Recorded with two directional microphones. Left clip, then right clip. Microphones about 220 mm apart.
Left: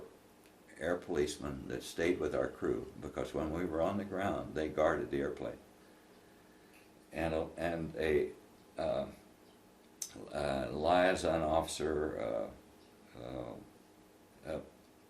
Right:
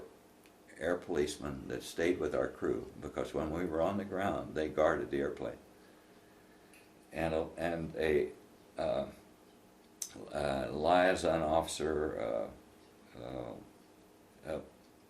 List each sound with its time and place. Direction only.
0.7 s speech: centre (ahead or behind)
7.1 s speech: centre (ahead or behind)
8.7 s burping: centre (ahead or behind)
10.0 s speech: centre (ahead or behind)
11.9 s speech: 10° right (ahead or behind)